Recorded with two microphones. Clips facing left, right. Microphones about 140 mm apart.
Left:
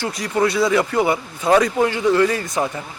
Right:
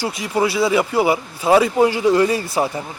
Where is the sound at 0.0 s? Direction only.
5° right (ahead or behind).